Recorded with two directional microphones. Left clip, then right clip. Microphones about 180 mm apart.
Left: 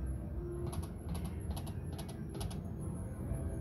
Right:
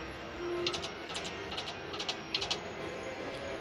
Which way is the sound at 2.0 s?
25° left (ahead or behind).